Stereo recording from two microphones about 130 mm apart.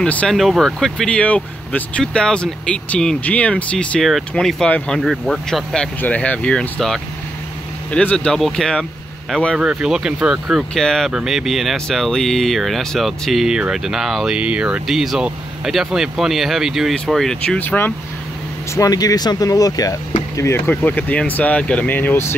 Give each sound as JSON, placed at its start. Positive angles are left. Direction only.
{"t": 0.0, "sound": "speech", "side_deg": 10}
{"t": 9.6, "sound": "speech", "side_deg": -5}
{"t": 18.8, "sound": "speech", "side_deg": 30}